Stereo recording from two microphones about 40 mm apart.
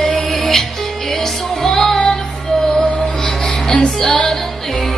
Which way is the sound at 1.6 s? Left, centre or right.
Centre.